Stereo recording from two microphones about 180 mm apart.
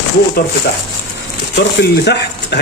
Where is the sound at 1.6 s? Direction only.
70° left (ahead or behind).